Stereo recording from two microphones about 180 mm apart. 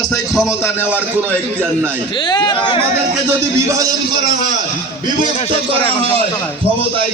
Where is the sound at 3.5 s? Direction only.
20° right (ahead or behind).